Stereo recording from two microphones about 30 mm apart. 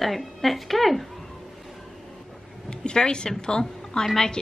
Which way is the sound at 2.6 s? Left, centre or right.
Left.